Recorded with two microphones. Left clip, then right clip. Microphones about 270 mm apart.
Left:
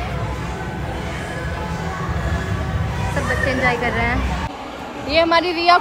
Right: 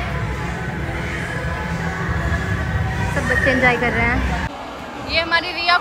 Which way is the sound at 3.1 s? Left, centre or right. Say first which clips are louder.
Right 3 dB; centre.